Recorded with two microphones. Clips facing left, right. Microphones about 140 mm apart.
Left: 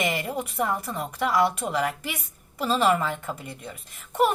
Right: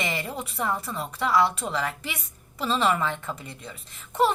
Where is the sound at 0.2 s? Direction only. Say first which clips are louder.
Left 3 dB; 10° left (ahead or behind).